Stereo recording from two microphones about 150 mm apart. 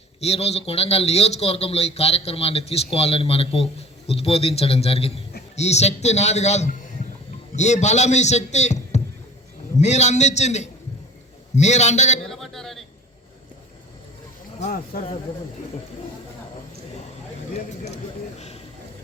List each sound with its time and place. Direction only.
0.2 s a man's voice: 45° left (ahead or behind)
12.2 s speech: centre (ahead or behind)
17.9 s a sound: 45° left (ahead or behind)